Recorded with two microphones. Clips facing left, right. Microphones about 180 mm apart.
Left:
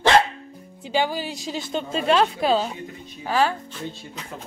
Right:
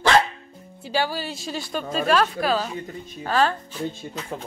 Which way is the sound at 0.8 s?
15° left (ahead or behind).